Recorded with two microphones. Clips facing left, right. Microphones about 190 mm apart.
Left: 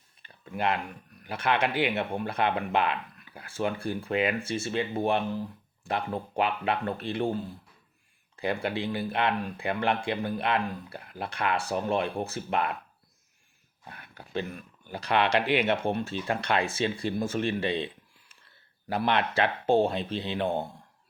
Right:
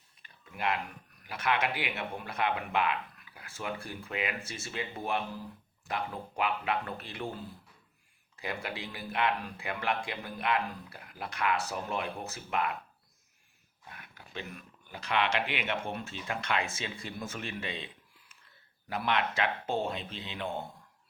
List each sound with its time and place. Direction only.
0.5 s speech: 30° left (ahead or behind)
8.4 s speech: 30° left (ahead or behind)
13.8 s a sound: 35° left (ahead or behind)
14.8 s speech: 35° left (ahead or behind)
17.6 s a sound: 30° left (ahead or behind)
18.9 s speech: 35° left (ahead or behind)